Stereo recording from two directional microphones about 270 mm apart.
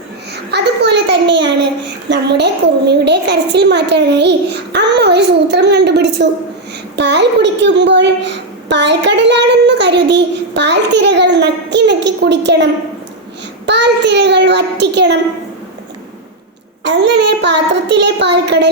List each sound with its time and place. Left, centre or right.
0.5 s a woman's voice: right
13.7 s a woman's voice: right
16.8 s a woman's voice: right